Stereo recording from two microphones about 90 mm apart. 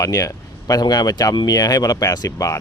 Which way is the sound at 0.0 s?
40° left (ahead or behind).